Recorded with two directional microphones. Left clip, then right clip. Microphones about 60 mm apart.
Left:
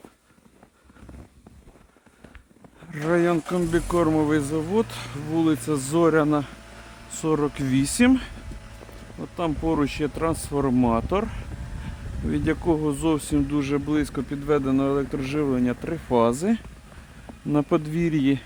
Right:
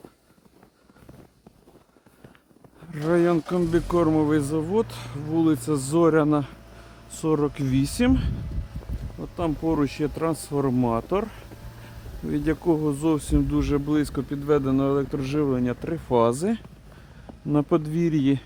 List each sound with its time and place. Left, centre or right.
2.9 s speech: centre
3.9 s speech: centre
4.9 s speech: left
5.5 s speech: centre
9.2 s speech: left
10.7 s speech: left
12.6 s speech: left
13.5 s speech: centre
17.5 s speech: left